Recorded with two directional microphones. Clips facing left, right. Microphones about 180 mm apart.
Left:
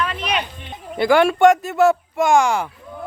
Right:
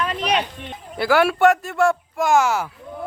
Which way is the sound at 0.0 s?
40° right (ahead or behind).